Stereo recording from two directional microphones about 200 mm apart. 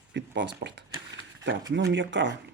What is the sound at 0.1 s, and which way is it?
Speech, 60° right (ahead or behind).